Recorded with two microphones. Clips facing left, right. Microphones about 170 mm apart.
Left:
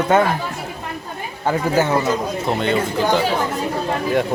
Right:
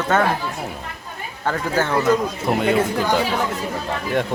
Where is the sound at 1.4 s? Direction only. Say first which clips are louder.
Left 4 dB; 10° left (ahead or behind).